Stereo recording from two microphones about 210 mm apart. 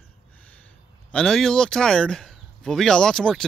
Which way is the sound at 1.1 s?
5° left (ahead or behind).